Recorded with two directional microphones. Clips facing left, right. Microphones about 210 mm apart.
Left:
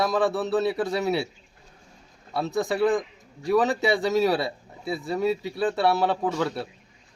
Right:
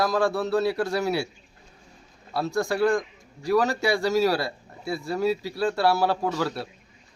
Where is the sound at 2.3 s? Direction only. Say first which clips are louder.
Even; centre (ahead or behind).